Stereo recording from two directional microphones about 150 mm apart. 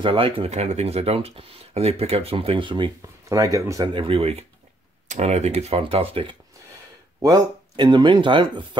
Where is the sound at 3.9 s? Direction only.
40° right (ahead or behind).